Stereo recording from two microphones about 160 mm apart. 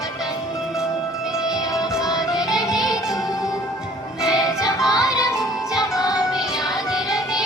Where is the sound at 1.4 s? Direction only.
20° left (ahead or behind).